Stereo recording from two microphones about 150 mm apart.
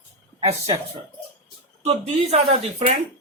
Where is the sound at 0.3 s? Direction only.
45° right (ahead or behind).